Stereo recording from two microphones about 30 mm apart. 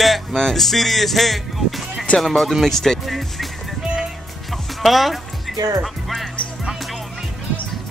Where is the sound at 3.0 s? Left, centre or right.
Centre.